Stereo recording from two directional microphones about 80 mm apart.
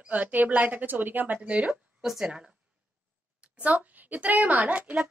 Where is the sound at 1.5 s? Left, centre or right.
Centre.